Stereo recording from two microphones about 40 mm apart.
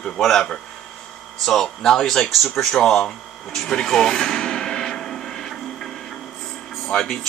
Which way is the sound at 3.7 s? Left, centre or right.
Centre.